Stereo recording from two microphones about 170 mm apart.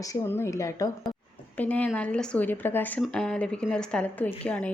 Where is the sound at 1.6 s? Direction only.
10° left (ahead or behind).